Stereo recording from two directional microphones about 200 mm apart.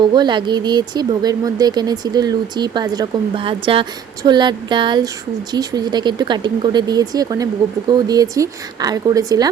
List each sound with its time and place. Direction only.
0.0 s speech: 20° right (ahead or behind)